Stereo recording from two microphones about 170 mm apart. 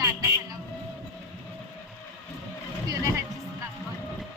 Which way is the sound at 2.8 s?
20° right (ahead or behind).